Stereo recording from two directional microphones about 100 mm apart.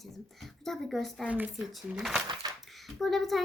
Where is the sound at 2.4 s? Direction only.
45° right (ahead or behind).